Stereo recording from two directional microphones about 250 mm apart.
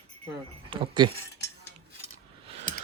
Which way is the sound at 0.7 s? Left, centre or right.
Centre.